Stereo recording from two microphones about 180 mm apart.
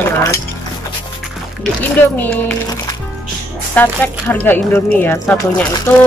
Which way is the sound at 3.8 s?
10° left (ahead or behind).